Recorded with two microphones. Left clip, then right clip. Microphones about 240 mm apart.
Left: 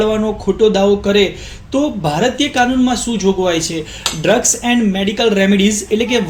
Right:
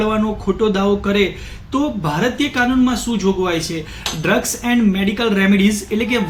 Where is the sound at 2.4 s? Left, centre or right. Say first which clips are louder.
Left 3 dB; centre.